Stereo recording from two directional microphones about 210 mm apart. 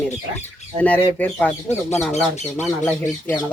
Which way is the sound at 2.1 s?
30° left (ahead or behind).